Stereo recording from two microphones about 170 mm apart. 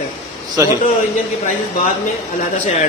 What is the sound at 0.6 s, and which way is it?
Speech, 15° right (ahead or behind).